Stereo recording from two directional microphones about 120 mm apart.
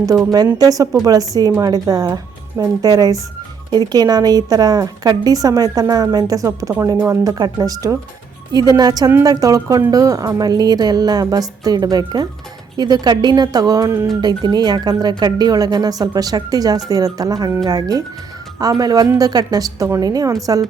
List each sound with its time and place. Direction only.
0.6 s a woman's voice: 30° right (ahead or behind)